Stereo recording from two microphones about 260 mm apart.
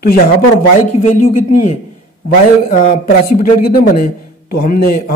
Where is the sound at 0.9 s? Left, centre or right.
Left.